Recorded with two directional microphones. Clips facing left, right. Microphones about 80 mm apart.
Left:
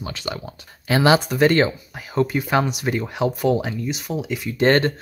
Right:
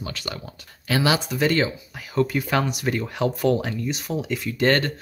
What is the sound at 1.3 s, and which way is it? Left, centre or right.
Speech, left.